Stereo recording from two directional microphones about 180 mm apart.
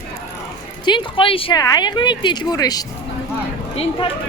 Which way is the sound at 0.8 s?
25° left (ahead or behind).